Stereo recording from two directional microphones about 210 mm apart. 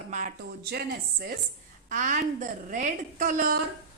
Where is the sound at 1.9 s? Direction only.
35° right (ahead or behind).